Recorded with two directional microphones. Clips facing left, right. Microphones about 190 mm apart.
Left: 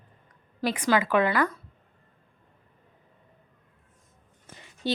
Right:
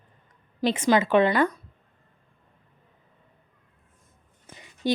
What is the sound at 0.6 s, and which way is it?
A woman's voice, 25° right (ahead or behind).